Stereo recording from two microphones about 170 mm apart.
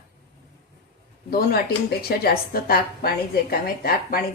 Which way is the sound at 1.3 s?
65° left (ahead or behind).